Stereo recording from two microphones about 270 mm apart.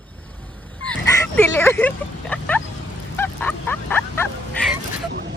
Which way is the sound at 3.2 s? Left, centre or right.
Centre.